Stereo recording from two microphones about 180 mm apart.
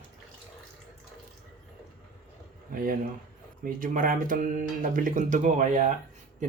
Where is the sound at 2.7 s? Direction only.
50° right (ahead or behind).